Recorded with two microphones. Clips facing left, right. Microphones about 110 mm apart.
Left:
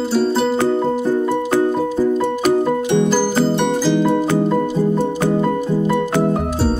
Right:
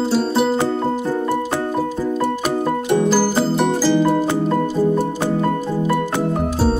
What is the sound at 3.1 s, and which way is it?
Music, 5° right (ahead or behind).